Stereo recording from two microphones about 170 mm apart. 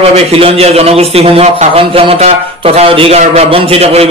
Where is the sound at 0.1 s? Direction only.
35° right (ahead or behind).